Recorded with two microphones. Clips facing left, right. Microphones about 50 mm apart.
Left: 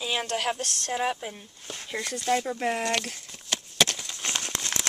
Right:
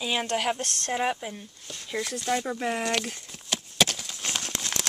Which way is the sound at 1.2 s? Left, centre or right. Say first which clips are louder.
Right 1 dB; centre.